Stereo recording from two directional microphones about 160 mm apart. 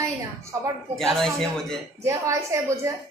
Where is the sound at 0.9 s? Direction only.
Centre (ahead or behind).